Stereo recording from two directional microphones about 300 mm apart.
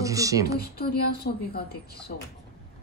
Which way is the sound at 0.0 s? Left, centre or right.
Centre.